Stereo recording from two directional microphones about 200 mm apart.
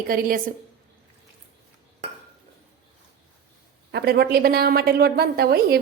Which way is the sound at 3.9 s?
55° right (ahead or behind).